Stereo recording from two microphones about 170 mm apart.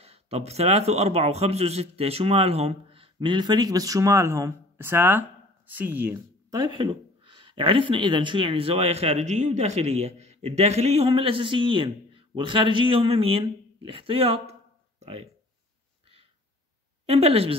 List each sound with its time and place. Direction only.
0.0 s a man's voice: 35° right (ahead or behind); by 6.6 s 10° right (ahead or behind)
6.6 s speech: 30° right (ahead or behind)
17.0 s a man's voice: 35° right (ahead or behind)